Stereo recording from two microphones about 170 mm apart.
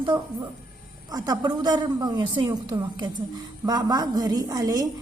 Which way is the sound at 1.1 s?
25° right (ahead or behind).